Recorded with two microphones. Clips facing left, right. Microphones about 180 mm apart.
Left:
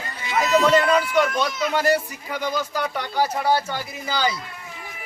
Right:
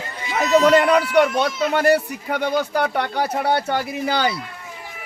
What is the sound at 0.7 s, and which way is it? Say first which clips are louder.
A man's voice: right 3 dB; 65° right (ahead or behind).